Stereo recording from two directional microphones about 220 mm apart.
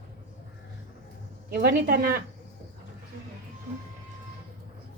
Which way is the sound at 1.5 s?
45° right (ahead or behind).